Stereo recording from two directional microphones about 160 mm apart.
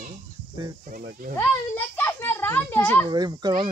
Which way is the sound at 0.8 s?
60° right (ahead or behind).